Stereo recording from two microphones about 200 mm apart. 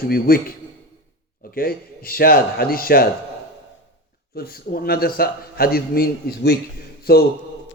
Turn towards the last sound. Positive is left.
turn(degrees=50)  # may be behind; listen again after turning